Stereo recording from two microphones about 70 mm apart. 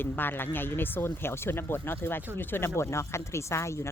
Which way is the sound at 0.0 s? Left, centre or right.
Left.